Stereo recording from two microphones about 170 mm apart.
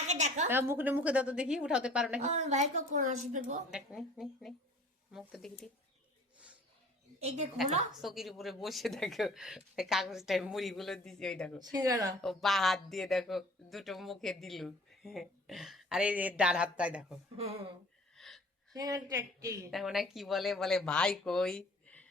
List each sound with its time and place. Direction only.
0.1 s a sound: 45° right (ahead or behind)
0.5 s a woman's voice: 15° right (ahead or behind)
2.2 s a woman's voice: 45° right (ahead or behind)
3.7 s speech: 5° right (ahead or behind)
7.2 s a woman's voice: 40° right (ahead or behind)
8.0 s speech: centre (ahead or behind)
11.9 s a woman's voice: 20° right (ahead or behind)
12.2 s speech: centre (ahead or behind)
17.3 s a woman's voice: 40° right (ahead or behind)
18.1 s gasp: centre (ahead or behind)
18.7 s a woman's voice: 20° right (ahead or behind)
19.7 s speech: centre (ahead or behind)